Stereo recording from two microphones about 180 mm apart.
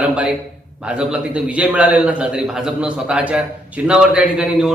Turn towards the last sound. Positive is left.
turn(degrees=-5)  # may be behind; listen again after turning